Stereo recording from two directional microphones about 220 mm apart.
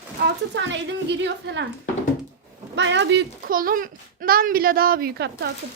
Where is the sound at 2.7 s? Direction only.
55° right (ahead or behind).